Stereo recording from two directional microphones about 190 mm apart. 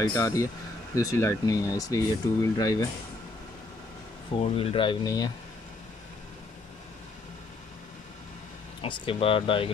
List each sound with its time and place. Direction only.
0.0 s speech: 20° left (ahead or behind)
4.4 s speech: 30° left (ahead or behind)
8.8 s speech: 25° left (ahead or behind)